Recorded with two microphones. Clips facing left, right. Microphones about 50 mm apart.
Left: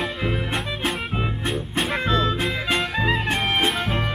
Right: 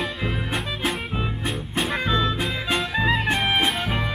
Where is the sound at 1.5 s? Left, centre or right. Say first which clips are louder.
Left 1 dB; centre.